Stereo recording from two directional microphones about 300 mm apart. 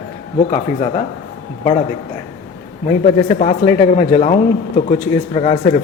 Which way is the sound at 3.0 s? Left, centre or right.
Left.